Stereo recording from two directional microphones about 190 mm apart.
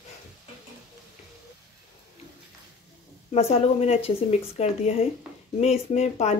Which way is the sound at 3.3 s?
35° left (ahead or behind).